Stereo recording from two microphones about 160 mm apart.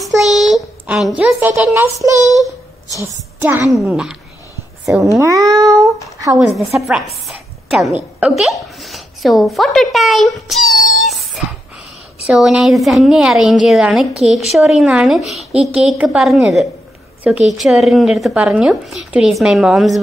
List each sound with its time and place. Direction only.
0.0 s a woman's voice: centre (ahead or behind)
5.2 s cat: 20° right (ahead or behind)
6.9 s a woman's voice: centre (ahead or behind)